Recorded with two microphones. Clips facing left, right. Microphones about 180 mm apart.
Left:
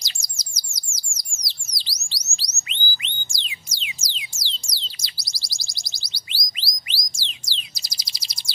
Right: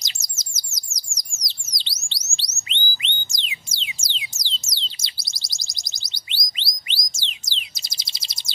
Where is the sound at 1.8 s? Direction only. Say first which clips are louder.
Right 2 dB; 25° right (ahead or behind).